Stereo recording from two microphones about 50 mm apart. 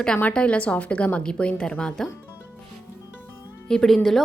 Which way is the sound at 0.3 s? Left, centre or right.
Left.